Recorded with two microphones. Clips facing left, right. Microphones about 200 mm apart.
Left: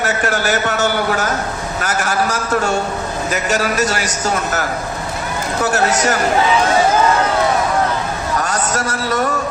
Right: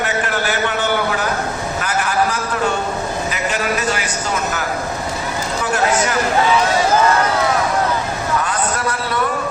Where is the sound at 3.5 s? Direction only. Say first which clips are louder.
Left 3 dB; 45° left (ahead or behind).